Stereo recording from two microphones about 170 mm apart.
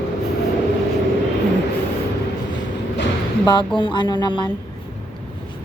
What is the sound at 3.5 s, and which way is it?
Speech, 30° left (ahead or behind).